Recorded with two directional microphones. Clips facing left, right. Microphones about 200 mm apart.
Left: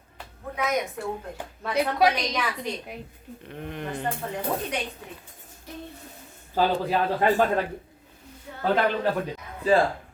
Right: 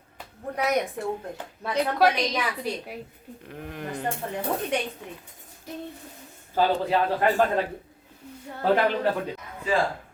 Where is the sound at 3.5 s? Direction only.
5° right (ahead or behind).